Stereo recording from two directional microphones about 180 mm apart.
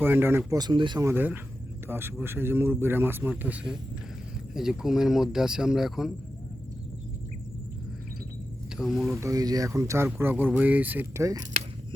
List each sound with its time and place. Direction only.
0.0 s speech: 10° right (ahead or behind)
8.7 s speech: centre (ahead or behind)
9.1 s speech: 15° right (ahead or behind)